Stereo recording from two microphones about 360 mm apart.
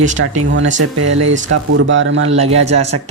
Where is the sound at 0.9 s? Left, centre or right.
Right.